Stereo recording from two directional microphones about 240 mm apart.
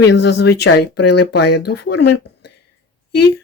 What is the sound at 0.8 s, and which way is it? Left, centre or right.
Speech, left.